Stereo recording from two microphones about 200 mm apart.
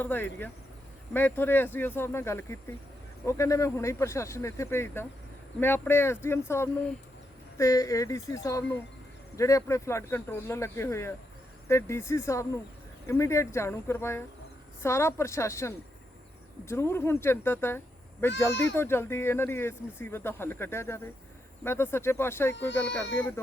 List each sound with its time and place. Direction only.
0.0 s speech: 10° left (ahead or behind)